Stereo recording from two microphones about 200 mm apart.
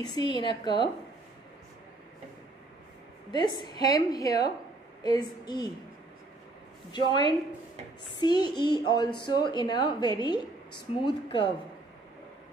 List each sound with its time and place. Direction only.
0.0 s a woman's voice: 20° left (ahead or behind)
3.3 s a woman's voice: 20° left (ahead or behind)
7.1 s a woman's voice: 20° left (ahead or behind)